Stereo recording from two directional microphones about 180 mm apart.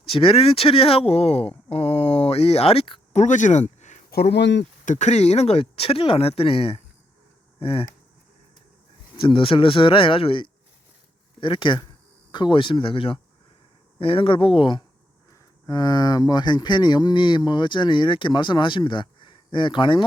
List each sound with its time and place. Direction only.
0.1 s speech: 30° left (ahead or behind)
4.1 s speech: 65° left (ahead or behind)
4.9 s speech: 40° left (ahead or behind)
9.2 s speech: 30° left (ahead or behind)